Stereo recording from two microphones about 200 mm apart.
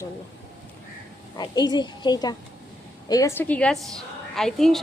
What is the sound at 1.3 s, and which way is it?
A child's voice, 20° left (ahead or behind).